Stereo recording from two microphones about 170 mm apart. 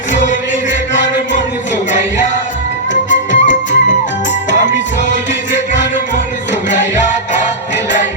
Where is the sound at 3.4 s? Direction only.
45° left (ahead or behind).